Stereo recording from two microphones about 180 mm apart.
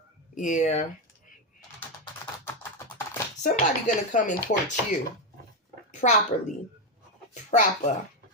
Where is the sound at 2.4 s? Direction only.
15° left (ahead or behind).